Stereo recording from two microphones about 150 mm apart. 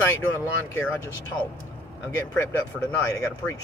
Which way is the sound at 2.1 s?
15° left (ahead or behind).